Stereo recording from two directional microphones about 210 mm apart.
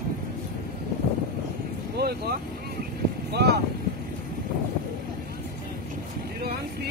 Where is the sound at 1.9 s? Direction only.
50° right (ahead or behind).